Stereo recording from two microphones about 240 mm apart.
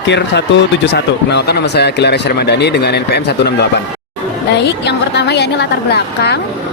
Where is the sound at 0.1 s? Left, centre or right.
Left.